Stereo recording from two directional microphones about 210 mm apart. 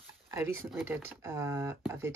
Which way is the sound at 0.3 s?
15° right (ahead or behind).